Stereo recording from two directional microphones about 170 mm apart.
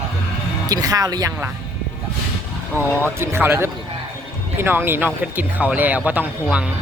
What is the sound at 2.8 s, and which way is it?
Speech, 15° right (ahead or behind).